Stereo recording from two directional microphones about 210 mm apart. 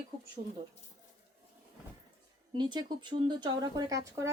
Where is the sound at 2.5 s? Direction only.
20° right (ahead or behind).